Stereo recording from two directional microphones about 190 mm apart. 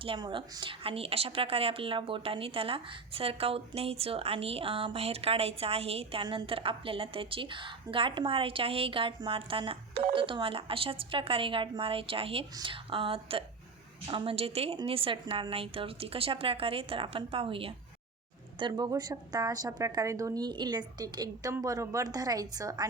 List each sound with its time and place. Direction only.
0.0 s a woman's voice: 25° right (ahead or behind)